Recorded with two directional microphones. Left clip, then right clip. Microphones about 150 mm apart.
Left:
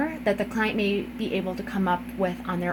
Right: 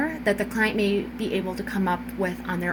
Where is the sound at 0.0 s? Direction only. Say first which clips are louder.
Right 1 dB; 50° left (ahead or behind).